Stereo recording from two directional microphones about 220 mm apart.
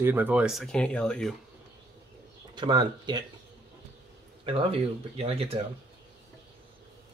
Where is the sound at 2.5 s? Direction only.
20° right (ahead or behind).